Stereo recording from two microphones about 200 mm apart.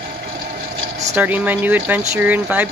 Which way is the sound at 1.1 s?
10° right (ahead or behind).